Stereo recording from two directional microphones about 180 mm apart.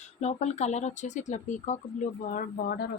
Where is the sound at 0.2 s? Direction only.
40° left (ahead or behind).